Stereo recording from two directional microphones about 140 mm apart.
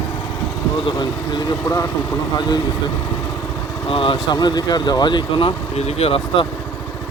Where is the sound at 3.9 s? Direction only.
40° left (ahead or behind).